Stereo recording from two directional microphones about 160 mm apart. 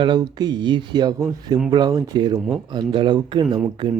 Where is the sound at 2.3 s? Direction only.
5° right (ahead or behind).